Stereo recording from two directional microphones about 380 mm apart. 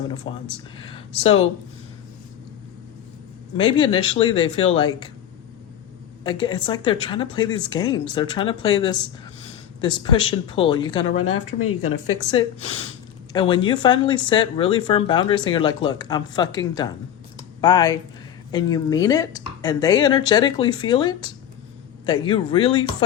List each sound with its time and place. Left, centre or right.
0.5 s speech: centre
3.6 s speech: centre
6.2 s speech: centre
11.3 s speech: left
12.3 s speech: centre